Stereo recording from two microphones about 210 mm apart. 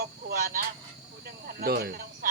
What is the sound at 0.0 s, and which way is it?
Speech, 45° right (ahead or behind).